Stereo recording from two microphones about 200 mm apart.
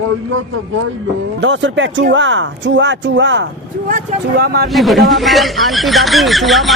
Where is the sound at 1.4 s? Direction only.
65° right (ahead or behind).